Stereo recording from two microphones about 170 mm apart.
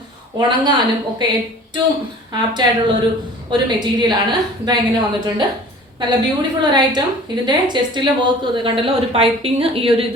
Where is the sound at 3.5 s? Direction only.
25° right (ahead or behind).